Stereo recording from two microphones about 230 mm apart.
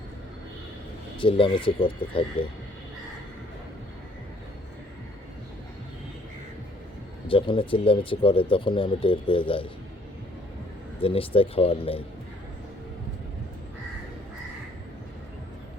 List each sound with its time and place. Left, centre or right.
1.2 s speech: left
7.3 s speech: left
11.0 s speech: left